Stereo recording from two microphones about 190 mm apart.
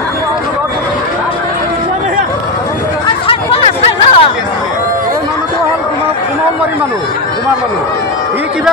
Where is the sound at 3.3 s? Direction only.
30° left (ahead or behind).